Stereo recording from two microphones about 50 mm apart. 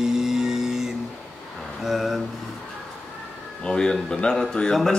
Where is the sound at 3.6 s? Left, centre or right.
Centre.